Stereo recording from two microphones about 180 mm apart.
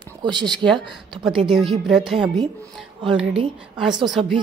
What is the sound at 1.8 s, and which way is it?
Speech, centre (ahead or behind).